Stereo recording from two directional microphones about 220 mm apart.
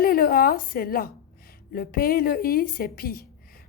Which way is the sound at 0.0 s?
40° left (ahead or behind).